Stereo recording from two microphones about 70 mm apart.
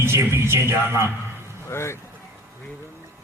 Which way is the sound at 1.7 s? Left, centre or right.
Left.